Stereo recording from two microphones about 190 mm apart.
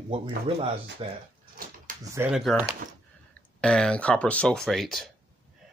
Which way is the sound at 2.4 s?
Centre (ahead or behind).